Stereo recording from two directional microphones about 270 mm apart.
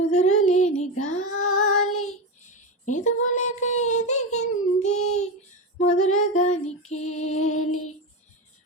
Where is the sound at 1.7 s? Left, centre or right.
Left.